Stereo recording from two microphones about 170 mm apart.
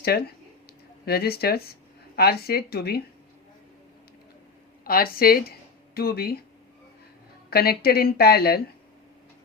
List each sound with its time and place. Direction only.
0.0 s a woman's voice: 65° left (ahead or behind)
4.8 s speech: 60° left (ahead or behind)
7.5 s a woman's voice: 65° left (ahead or behind)